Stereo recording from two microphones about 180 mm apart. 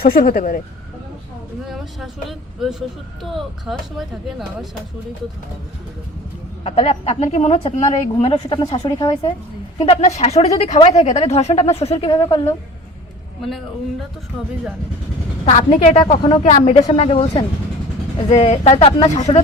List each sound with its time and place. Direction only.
0.0 s speech: 55° left (ahead or behind)
1.6 s speech: centre (ahead or behind)
3.3 s speech: centre (ahead or behind)
6.7 s a woman's voice: 35° left (ahead or behind)
9.8 s a woman's voice: 35° left (ahead or behind)
15.4 s a woman's voice: 40° left (ahead or behind)
16.4 s a woman's voice: 40° left (ahead or behind)
18.3 s a woman's voice: 35° left (ahead or behind)